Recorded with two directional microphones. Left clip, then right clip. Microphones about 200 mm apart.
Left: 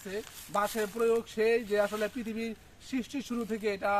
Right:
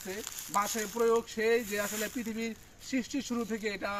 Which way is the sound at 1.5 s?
60° right (ahead or behind).